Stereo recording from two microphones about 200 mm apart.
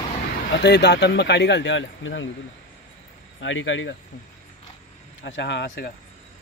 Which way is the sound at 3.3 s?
70° left (ahead or behind).